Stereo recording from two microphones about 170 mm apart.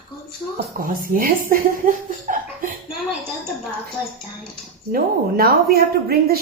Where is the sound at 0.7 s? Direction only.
55° right (ahead or behind).